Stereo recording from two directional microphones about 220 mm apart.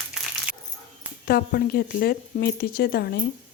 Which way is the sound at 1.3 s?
45° left (ahead or behind).